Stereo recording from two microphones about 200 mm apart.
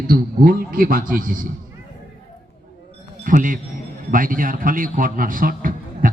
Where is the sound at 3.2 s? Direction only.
40° right (ahead or behind).